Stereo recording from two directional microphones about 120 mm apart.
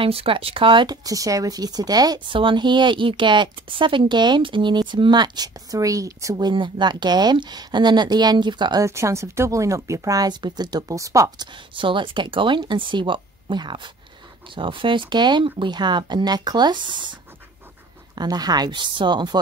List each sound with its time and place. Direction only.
0.0 s speech: 50° right (ahead or behind)
1.0 s speech: 30° right (ahead or behind)
8.8 s speech: 25° right (ahead or behind)
11.7 s speech: 45° right (ahead or behind)